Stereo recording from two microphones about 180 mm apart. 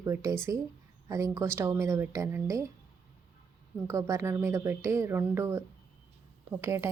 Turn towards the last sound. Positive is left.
turn(degrees=-15)  # may be behind; listen again after turning